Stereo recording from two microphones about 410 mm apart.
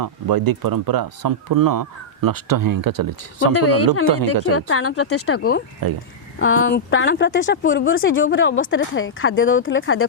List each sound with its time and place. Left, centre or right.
0.0 s speech: right
4.5 s speech: left